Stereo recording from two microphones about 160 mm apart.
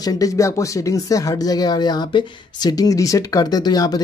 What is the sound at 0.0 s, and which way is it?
Speech, 20° left (ahead or behind).